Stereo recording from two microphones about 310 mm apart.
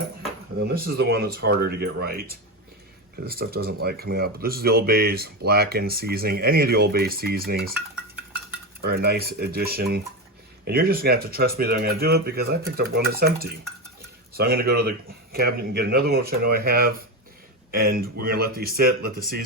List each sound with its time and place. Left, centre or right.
0.6 s speech: right
3.2 s speech: right
8.8 s speech: right